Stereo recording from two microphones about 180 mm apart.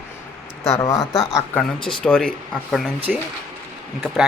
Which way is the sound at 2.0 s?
5° left (ahead or behind).